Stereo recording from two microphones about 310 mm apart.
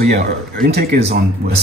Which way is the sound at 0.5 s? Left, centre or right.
Right.